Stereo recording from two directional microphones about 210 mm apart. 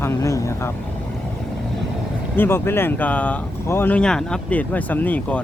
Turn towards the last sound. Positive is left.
turn(degrees=5)  # may be behind; listen again after turning